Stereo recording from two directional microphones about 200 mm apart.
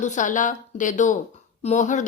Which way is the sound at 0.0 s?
40° left (ahead or behind).